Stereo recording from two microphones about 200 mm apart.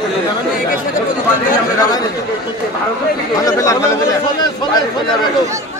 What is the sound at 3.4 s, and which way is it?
Speech, 15° left (ahead or behind).